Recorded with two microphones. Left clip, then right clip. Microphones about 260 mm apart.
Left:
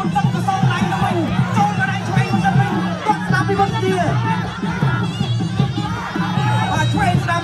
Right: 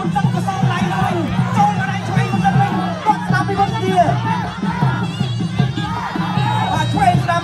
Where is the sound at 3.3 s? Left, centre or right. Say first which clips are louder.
Even; right.